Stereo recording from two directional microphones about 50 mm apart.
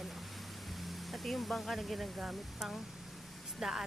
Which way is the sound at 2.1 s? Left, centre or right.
Centre.